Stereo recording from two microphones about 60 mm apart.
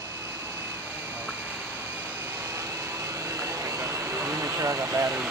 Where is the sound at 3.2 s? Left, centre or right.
Right.